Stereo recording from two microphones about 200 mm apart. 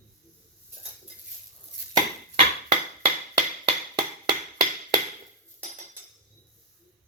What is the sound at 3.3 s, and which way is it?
Hammer, 25° right (ahead or behind).